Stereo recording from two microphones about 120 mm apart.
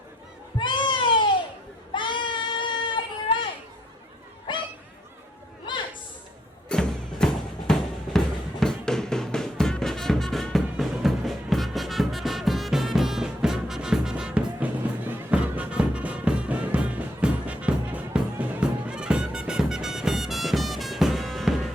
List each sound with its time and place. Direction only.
0.6 s cat: 40° left (ahead or behind)
1.9 s child singing: 40° left (ahead or behind)
4.5 s dog: 40° left (ahead or behind)
6.7 s music: 5° left (ahead or behind)